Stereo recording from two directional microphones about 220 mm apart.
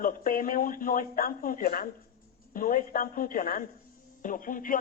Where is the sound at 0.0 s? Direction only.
40° left (ahead or behind).